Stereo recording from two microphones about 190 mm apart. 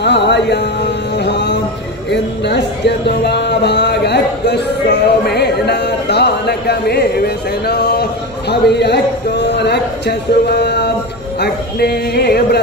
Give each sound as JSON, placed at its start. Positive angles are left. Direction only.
{"t": 0.0, "sound": "music", "side_deg": 65}
{"t": 2.0, "sound": "speech", "side_deg": 65}